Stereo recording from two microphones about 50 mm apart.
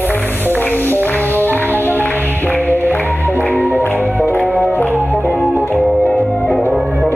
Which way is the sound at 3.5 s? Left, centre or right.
Right.